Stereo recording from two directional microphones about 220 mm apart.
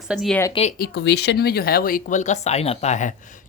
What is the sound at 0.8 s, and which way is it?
Speech, 50° left (ahead or behind).